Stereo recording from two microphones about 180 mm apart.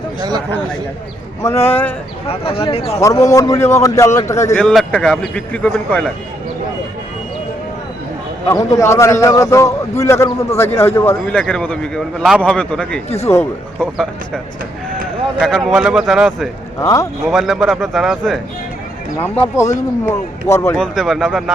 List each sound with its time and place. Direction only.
0.2 s a man's voice: 20° right (ahead or behind)
1.6 s a man's voice: 10° left (ahead or behind)
2.2 s speech: 30° left (ahead or behind)
3.0 s a man's voice: 15° left (ahead or behind)
4.6 s a man's voice: 5° left (ahead or behind)
8.4 s a man's voice: 15° left (ahead or behind)
13.1 s speech: 35° left (ahead or behind)
13.7 s a man's voice: 5° left (ahead or behind)
16.8 s a man's voice: 15° left (ahead or behind)
17.2 s a man's voice: centre (ahead or behind)
19.2 s a man's voice: 15° left (ahead or behind)
20.7 s a man's voice: 5° left (ahead or behind)